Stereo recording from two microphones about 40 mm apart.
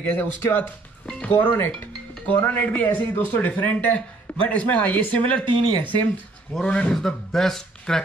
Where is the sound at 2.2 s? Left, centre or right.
Left.